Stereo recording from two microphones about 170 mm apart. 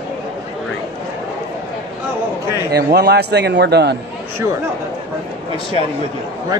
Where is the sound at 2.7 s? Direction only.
70° right (ahead or behind).